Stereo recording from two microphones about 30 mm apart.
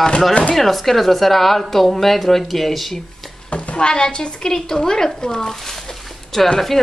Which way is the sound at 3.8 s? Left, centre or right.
Left.